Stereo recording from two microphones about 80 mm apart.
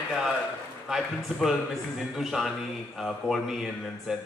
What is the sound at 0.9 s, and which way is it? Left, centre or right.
Speech, centre.